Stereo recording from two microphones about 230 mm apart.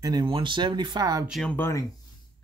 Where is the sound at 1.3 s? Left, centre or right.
Centre.